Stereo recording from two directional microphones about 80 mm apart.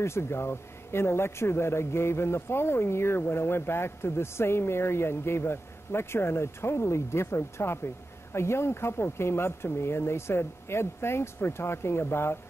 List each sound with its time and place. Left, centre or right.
0.0 s speech: left